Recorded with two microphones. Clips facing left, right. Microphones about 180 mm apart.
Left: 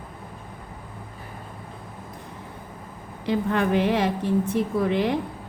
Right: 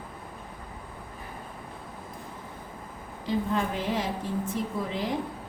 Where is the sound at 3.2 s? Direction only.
70° left (ahead or behind).